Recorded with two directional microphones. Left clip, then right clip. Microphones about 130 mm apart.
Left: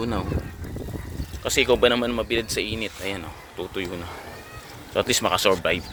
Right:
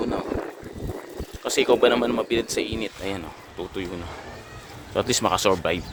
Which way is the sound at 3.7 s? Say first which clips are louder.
Left 2 dB; 5° right (ahead or behind).